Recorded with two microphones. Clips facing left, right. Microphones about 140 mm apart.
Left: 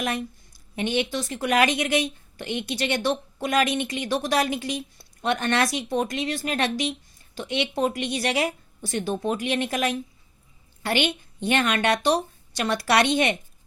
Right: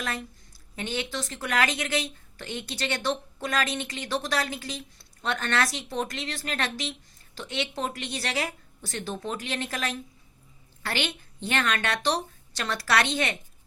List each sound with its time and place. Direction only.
0.0 s speech: 15° left (ahead or behind)